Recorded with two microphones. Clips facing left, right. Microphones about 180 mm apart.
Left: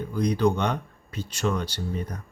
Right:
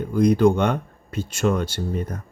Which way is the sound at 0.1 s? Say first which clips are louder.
Right 7 dB; 50° right (ahead or behind).